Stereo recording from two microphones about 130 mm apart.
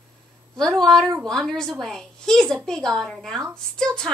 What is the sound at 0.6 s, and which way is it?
A woman's voice, 5° left (ahead or behind).